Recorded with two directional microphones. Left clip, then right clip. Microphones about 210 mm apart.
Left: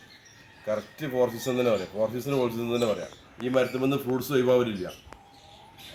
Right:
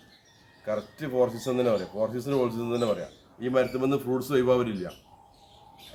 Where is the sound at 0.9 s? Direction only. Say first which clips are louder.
Right 2 dB; 15° left (ahead or behind).